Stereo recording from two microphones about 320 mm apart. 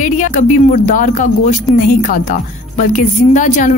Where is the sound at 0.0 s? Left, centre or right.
Left.